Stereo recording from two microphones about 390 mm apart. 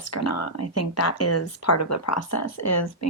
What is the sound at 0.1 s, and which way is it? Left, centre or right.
Speech, left.